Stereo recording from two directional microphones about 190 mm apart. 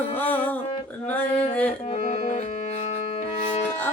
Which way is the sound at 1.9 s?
35° left (ahead or behind).